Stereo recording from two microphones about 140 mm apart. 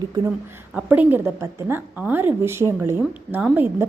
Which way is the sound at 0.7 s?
10° right (ahead or behind).